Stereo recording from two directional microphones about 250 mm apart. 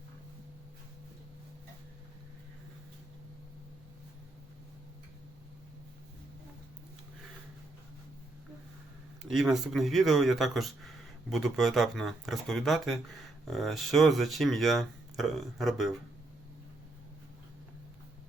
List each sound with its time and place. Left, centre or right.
9.2 s speech: centre